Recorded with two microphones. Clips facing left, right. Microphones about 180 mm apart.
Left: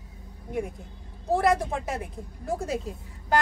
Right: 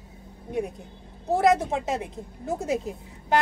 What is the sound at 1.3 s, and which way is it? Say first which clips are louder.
A woman's voice: right 2 dB; 20° right (ahead or behind).